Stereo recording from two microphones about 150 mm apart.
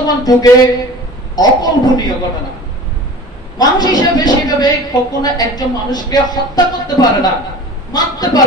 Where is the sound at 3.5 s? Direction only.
25° left (ahead or behind).